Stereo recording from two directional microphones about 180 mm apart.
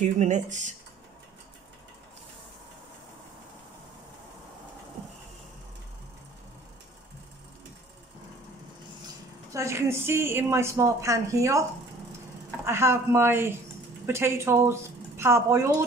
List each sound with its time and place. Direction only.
0.0 s speech: 40° right (ahead or behind)
9.5 s a woman's voice: 15° right (ahead or behind)
12.6 s a woman's voice: 15° right (ahead or behind)